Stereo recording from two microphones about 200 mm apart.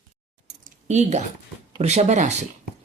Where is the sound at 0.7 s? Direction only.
35° right (ahead or behind).